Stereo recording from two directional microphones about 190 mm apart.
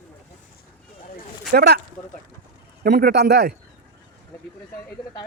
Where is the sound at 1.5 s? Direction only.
60° right (ahead or behind).